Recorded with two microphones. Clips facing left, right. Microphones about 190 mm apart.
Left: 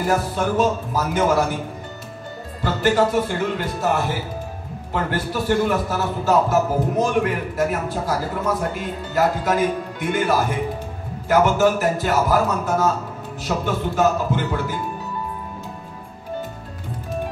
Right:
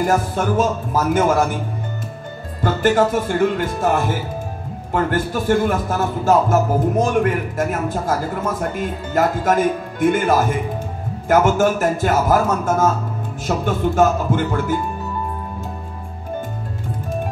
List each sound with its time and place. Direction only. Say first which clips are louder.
0.0 s a man's voice: right 2 dB; 50° right (ahead or behind)
2.6 s a man's voice: right 2 dB; 50° right (ahead or behind)